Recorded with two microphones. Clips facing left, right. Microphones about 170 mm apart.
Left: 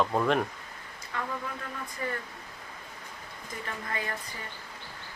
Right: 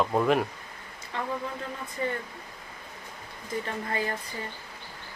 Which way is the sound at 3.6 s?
30° right (ahead or behind).